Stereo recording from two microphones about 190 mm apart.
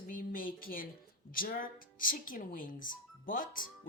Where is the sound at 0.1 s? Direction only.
45° left (ahead or behind).